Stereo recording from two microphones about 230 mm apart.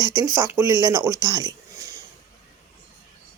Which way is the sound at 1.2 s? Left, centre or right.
Centre.